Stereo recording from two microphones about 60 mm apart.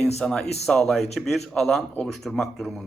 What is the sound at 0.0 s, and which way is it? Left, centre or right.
Speech, centre.